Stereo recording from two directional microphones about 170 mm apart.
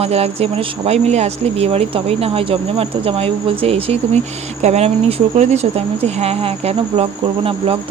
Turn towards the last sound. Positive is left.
turn(degrees=-35)  # may be behind; listen again after turning